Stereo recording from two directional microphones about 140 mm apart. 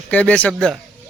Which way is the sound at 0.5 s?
Centre (ahead or behind).